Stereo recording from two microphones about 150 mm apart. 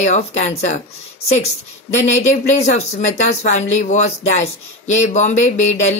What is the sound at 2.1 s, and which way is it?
Speech, 50° left (ahead or behind).